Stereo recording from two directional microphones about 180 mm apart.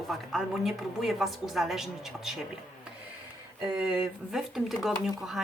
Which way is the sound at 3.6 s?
20° right (ahead or behind).